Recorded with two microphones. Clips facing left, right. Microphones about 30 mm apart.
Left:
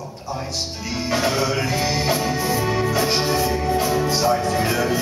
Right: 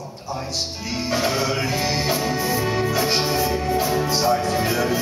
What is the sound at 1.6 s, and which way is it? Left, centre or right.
Music, centre.